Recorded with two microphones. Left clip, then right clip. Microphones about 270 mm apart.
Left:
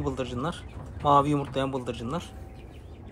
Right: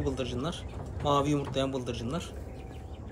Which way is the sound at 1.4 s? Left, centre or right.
Left.